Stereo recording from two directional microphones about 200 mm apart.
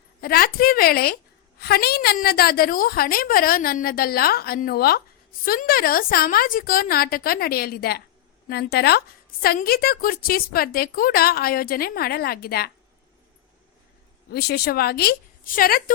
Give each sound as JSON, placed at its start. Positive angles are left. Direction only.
{"t": 0.2, "sound": "a woman's voice", "side_deg": 50}
{"t": 14.3, "sound": "a woman's voice", "side_deg": 50}